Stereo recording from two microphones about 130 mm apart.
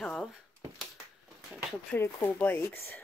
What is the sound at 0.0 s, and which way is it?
Speech, 5° left (ahead or behind).